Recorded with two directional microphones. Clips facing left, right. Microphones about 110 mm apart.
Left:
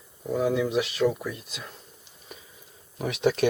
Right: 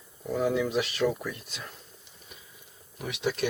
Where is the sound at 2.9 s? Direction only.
35° left (ahead or behind).